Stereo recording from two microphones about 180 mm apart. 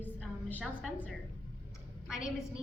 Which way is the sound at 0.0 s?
10° left (ahead or behind).